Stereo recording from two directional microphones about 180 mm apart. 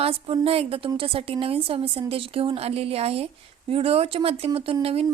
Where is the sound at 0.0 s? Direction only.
30° right (ahead or behind).